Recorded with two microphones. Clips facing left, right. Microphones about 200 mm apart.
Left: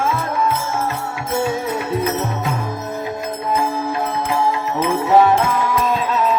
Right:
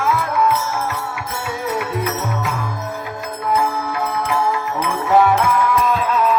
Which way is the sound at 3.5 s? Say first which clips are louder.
Right 1 dB; 25° left (ahead or behind).